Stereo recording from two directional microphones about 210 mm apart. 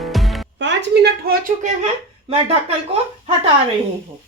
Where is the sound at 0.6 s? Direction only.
55° right (ahead or behind).